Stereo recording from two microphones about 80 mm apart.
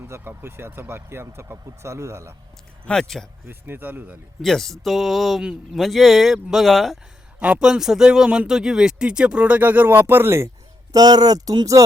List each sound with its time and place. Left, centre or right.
0.0 s speech: right
2.8 s speech: centre
3.4 s speech: right
4.4 s speech: centre
7.3 s a man's voice: centre; by 10.5 s right
10.9 s speech: right